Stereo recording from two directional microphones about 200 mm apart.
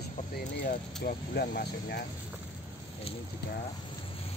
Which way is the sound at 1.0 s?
50° left (ahead or behind).